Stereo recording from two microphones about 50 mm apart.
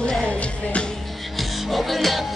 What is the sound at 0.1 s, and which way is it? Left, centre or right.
Music, centre.